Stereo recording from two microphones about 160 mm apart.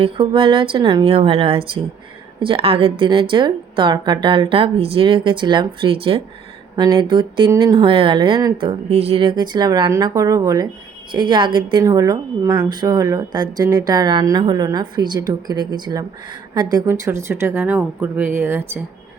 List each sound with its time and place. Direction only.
0.0 s a woman's voice: 35° right (ahead or behind)
8.9 s a woman's voice: 40° right (ahead or behind); by 18.8 s 15° right (ahead or behind)